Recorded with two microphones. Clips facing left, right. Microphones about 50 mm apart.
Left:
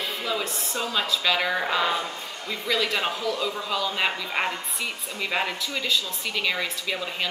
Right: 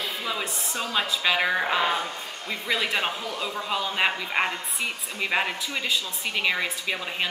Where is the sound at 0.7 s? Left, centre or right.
Centre.